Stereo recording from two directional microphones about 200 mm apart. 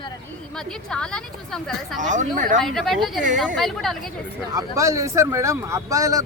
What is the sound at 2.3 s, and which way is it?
Speech, 40° right (ahead or behind).